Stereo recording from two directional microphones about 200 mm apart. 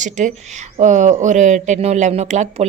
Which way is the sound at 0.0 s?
40° right (ahead or behind).